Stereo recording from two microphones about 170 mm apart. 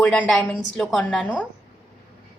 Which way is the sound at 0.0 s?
5° left (ahead or behind).